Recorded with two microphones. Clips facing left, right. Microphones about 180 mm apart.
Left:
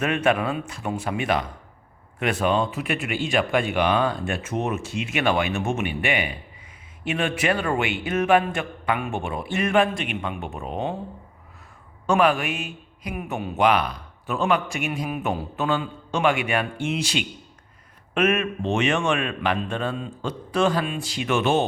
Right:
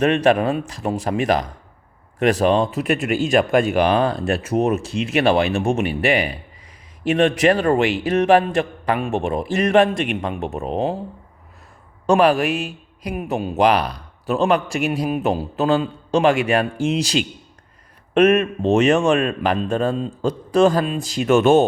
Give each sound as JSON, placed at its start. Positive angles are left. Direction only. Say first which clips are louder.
{"t": 0.0, "sound": "a man's voice", "louder": "right 6 dB", "side_deg": -35}
{"t": 12.0, "sound": "a man's voice", "louder": "right 5 dB", "side_deg": -35}